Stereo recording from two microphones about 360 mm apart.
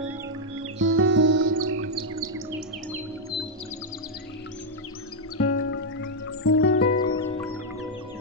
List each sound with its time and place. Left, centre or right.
0.7 s chirp: right
5.4 s music: left